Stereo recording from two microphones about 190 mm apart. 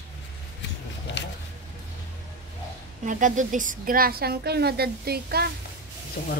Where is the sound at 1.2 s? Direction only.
70° left (ahead or behind).